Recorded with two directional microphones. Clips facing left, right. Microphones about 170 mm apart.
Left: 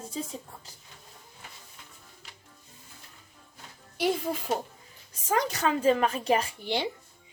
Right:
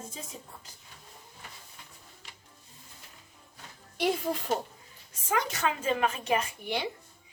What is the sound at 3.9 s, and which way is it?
Speech, centre (ahead or behind).